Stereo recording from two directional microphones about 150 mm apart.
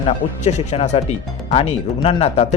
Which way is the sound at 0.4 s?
45° left (ahead or behind).